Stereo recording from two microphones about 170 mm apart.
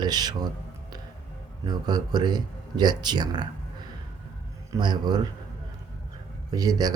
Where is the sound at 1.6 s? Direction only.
25° right (ahead or behind).